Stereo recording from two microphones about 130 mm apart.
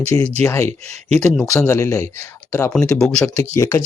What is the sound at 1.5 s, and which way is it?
Speech, 20° left (ahead or behind).